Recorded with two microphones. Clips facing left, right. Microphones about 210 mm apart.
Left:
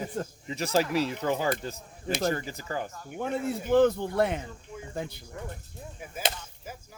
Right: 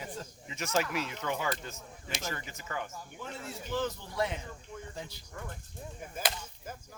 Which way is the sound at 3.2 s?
55° left (ahead or behind).